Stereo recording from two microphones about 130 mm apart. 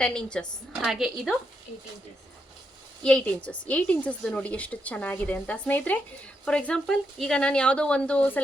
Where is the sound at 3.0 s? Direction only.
10° left (ahead or behind).